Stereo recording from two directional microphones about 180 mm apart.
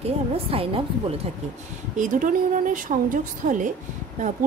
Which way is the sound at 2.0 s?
50° right (ahead or behind).